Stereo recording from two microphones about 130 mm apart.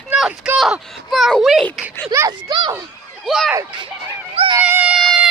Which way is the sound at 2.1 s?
25° right (ahead or behind).